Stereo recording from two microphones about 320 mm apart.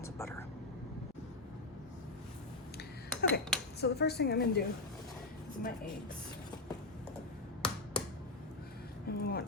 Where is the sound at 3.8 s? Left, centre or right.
Left.